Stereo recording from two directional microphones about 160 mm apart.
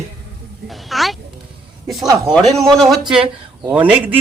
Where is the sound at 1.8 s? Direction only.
Centre (ahead or behind).